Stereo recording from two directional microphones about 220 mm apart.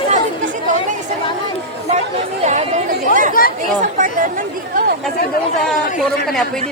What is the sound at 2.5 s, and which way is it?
Chatter, 30° right (ahead or behind).